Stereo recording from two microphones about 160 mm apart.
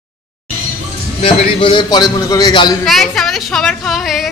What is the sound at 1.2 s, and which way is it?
A man's voice, 30° left (ahead or behind).